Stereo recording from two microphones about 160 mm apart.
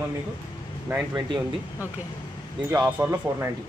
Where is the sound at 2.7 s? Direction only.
15° right (ahead or behind).